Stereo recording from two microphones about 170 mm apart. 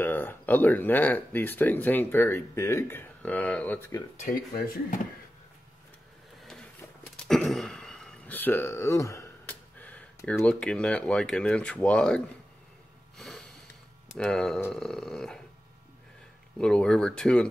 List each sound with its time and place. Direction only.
0.0 s speech: 10° left (ahead or behind)
4.2 s speech: 55° left (ahead or behind)
7.2 s a sound: centre (ahead or behind)
13.2 s sniff: centre (ahead or behind)
14.0 s speech: 5° left (ahead or behind)
16.5 s speech: 5° left (ahead or behind)